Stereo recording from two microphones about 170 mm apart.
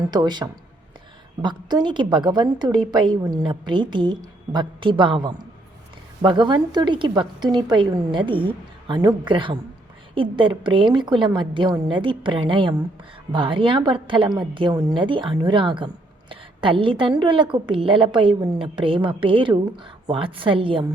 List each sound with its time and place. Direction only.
0.0 s a woman's voice: 25° right (ahead or behind)